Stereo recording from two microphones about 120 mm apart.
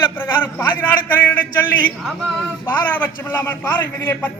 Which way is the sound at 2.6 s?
15° left (ahead or behind).